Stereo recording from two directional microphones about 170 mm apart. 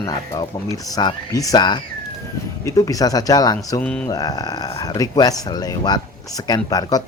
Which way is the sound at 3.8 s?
5° left (ahead or behind).